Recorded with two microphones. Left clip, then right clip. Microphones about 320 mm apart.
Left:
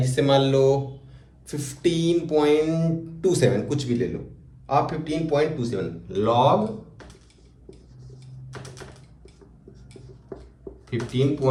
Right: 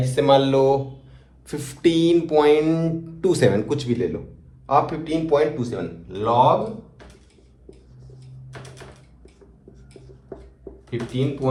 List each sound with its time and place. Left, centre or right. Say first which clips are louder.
0.0 s speech: right 3 dB; centre
1.5 s music: right 4 dB; right
5.7 s speech: left 2 dB; centre
10.8 s speech: right 1 dB; centre